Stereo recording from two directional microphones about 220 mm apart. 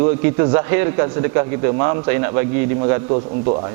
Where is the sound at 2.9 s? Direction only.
25° right (ahead or behind).